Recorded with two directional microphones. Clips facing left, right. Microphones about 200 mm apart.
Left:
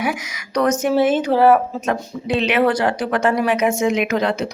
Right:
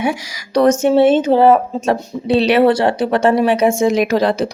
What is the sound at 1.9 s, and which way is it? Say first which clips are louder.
Speech: right 6 dB; 35° right (ahead or behind).